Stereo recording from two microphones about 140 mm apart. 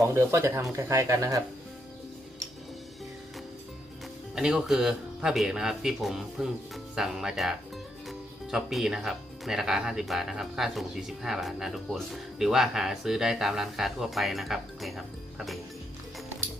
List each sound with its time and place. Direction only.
0.0 s speech: 20° right (ahead or behind)
4.4 s speech: 5° right (ahead or behind)